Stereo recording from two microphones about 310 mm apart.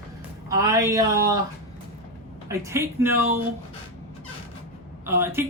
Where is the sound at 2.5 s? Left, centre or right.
Centre.